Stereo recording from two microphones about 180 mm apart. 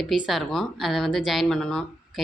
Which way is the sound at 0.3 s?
Centre (ahead or behind).